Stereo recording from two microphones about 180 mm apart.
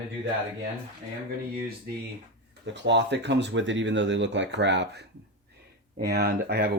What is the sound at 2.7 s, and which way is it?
Speech, 75° right (ahead or behind).